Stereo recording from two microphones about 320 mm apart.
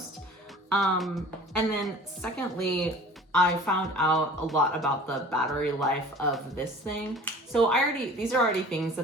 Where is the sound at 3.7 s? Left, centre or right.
Centre.